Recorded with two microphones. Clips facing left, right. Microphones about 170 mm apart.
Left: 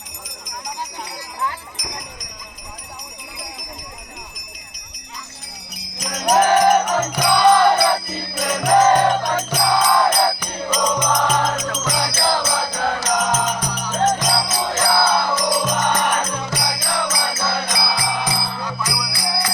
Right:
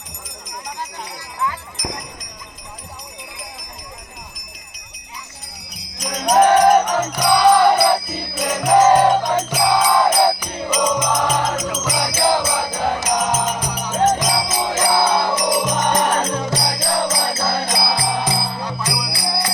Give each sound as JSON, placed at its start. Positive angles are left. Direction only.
{"t": 6.0, "sound": "music", "side_deg": 5}